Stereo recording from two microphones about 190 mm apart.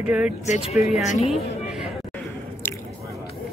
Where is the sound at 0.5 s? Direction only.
35° left (ahead or behind).